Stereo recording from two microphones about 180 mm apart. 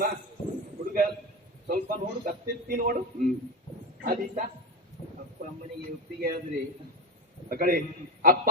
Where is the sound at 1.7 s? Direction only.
50° right (ahead or behind).